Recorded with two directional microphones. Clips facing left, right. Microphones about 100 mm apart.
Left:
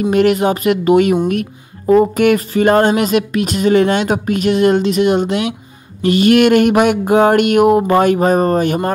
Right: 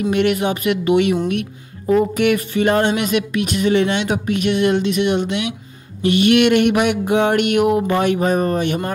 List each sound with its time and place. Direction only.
0.0 s speech: 40° left (ahead or behind)